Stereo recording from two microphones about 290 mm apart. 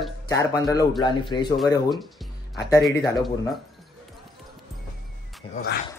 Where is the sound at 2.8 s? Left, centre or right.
Centre.